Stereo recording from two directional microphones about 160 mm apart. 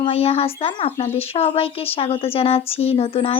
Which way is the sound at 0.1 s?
40° left (ahead or behind).